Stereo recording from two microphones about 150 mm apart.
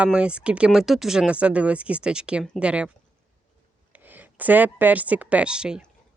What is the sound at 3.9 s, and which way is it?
Speech, 10° right (ahead or behind).